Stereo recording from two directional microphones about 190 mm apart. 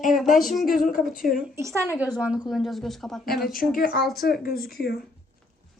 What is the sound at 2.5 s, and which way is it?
Speech, centre (ahead or behind).